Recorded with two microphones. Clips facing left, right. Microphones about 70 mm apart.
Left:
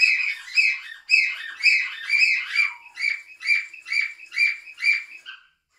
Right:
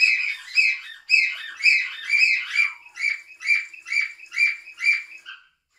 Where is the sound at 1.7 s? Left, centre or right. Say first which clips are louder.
Even; centre.